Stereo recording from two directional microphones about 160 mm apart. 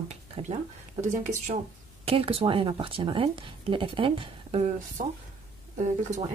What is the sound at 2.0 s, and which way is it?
Speech, 35° right (ahead or behind).